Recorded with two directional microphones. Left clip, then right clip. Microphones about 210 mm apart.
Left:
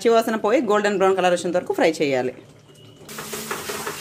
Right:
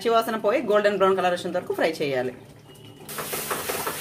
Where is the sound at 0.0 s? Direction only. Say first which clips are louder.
Left 3 dB; 35° left (ahead or behind).